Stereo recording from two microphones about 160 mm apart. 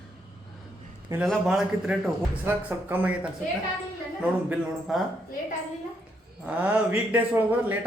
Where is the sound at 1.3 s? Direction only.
5° right (ahead or behind).